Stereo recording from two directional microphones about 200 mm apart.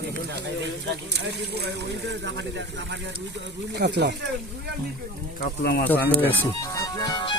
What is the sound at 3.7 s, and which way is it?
Speech, 55° right (ahead or behind).